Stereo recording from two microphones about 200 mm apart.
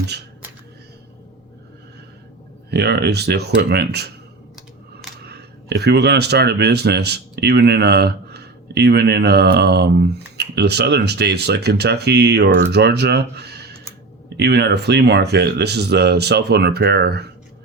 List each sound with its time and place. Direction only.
2.6 s speech: 55° right (ahead or behind)
5.2 s speech: 55° right (ahead or behind)